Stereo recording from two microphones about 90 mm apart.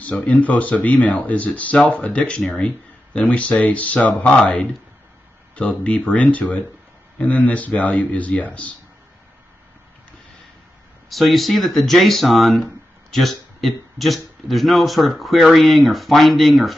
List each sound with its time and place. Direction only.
0.0 s speech: 15° left (ahead or behind)
11.1 s speech: centre (ahead or behind)